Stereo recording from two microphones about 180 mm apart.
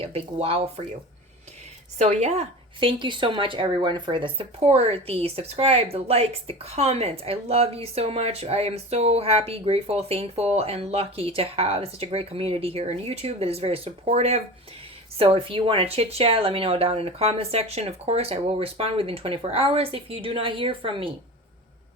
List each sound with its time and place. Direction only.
0.0 s a woman's voice: 35° right (ahead or behind)
2.0 s a woman's voice: 35° right (ahead or behind)